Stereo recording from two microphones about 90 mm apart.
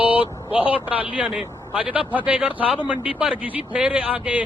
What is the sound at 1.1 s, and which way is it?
Speech, 15° right (ahead or behind).